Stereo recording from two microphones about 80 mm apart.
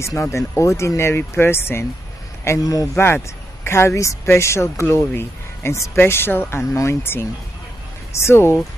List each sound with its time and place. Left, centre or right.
0.0 s speech: left
2.6 s speech: left
3.6 s speech: left